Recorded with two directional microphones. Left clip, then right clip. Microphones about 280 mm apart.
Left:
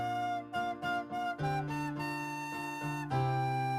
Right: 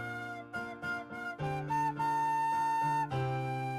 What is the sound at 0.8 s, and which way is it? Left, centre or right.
Flute, centre.